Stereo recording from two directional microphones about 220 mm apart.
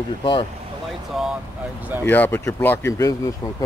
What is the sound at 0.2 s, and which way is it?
Speech, 25° left (ahead or behind).